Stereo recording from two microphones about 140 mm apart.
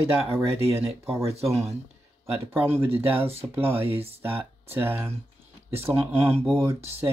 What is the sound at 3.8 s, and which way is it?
Speech, 45° right (ahead or behind).